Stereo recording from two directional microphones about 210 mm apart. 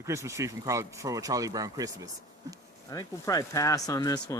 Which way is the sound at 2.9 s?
15° left (ahead or behind).